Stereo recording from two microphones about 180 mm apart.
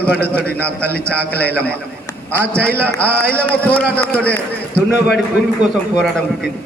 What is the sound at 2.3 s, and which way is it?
A man's voice, 15° right (ahead or behind).